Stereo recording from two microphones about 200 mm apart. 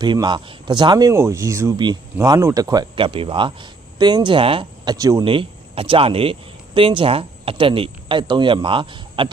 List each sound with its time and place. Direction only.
0.0 s speech: 20° right (ahead or behind)